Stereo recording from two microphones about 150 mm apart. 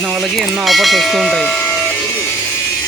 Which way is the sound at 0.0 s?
Centre (ahead or behind).